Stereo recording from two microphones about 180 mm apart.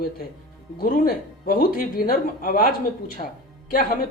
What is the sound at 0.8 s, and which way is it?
Speech, 50° left (ahead or behind).